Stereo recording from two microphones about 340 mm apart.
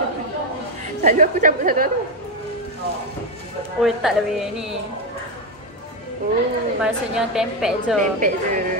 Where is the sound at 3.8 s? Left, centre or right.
Centre.